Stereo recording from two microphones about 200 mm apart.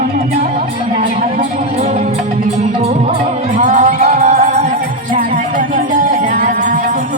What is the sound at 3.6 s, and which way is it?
Music, 40° right (ahead or behind).